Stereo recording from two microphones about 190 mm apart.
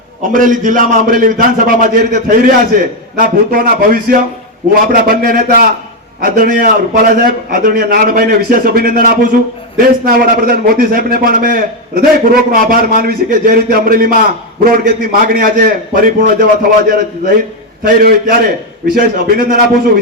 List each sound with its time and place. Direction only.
0.2 s a man's voice: 45° right (ahead or behind)